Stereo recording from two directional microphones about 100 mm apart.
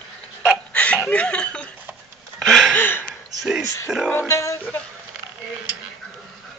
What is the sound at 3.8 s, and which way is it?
Speech, 5° right (ahead or behind).